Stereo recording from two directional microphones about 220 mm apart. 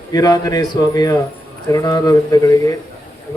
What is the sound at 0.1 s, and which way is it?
Speech, 15° left (ahead or behind).